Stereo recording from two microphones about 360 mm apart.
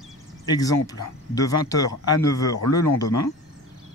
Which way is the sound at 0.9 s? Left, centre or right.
Centre.